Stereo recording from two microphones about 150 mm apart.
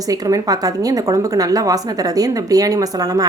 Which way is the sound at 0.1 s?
25° right (ahead or behind).